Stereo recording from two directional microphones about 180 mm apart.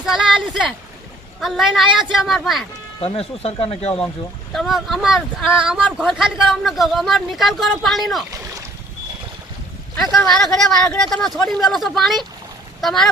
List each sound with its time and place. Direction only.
0.0 s a sound: centre (ahead or behind)
1.4 s speech: centre (ahead or behind)
3.0 s speech: 35° left (ahead or behind)
4.5 s speech: centre (ahead or behind)
10.0 s speech: centre (ahead or behind)